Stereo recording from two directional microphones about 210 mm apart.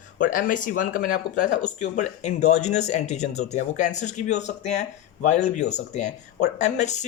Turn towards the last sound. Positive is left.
turn(degrees=35)  # may be behind; listen again after turning